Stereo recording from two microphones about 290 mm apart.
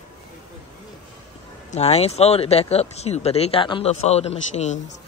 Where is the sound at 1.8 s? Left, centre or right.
Left.